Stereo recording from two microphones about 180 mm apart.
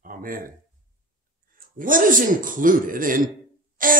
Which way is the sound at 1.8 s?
50° right (ahead or behind).